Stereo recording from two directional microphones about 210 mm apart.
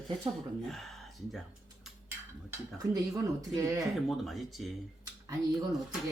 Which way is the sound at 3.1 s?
15° right (ahead or behind).